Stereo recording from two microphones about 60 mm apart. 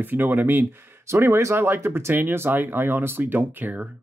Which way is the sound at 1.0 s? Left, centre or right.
Right.